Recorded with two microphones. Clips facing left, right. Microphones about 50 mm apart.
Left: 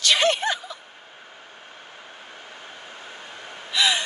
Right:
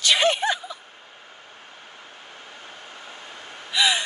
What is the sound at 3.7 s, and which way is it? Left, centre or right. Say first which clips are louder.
Gasp: even; centre.